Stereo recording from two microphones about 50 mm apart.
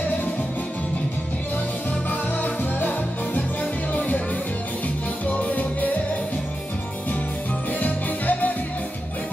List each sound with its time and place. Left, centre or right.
2.0 s music: left
5.2 s music: left
7.8 s music: left